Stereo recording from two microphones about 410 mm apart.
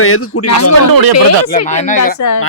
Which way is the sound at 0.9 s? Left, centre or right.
Right.